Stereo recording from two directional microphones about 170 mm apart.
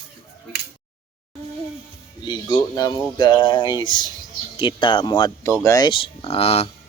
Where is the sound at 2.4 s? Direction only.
20° left (ahead or behind).